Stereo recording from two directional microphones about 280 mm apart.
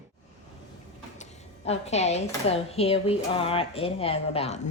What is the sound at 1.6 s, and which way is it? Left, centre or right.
Speech, left.